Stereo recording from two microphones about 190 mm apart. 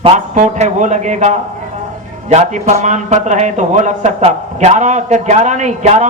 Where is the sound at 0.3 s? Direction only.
40° right (ahead or behind).